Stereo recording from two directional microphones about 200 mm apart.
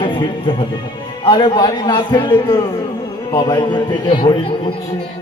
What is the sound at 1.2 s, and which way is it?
A man's voice, 25° left (ahead or behind).